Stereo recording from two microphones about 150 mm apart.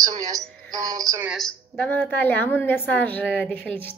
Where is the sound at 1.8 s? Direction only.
10° left (ahead or behind).